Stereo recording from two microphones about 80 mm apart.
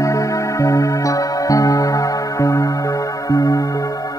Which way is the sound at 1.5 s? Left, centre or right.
Left.